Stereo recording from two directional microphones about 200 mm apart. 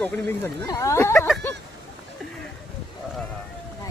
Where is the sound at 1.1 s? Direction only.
5° left (ahead or behind).